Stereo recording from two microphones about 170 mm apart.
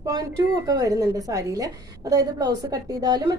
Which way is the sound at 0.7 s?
20° right (ahead or behind).